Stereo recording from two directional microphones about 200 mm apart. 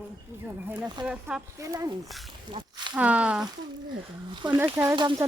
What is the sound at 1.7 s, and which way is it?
Speech, 15° right (ahead or behind).